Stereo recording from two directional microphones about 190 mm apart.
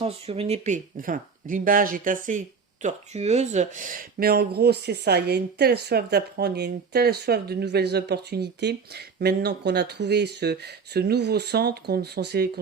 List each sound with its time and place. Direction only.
0.0 s speech: 30° right (ahead or behind); by 12.5 s 60° right (ahead or behind)